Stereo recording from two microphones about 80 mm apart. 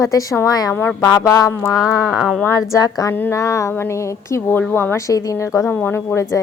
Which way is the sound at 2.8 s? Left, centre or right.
Left.